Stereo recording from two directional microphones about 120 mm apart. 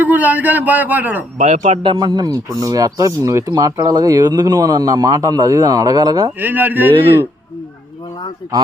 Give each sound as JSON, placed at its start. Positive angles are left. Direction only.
{"t": 0.0, "sound": "a man's voice", "side_deg": -15}
{"t": 1.4, "sound": "speech", "side_deg": -80}
{"t": 1.8, "sound": "a man's voice", "side_deg": -40}
{"t": 6.4, "sound": "a man's voice", "side_deg": -15}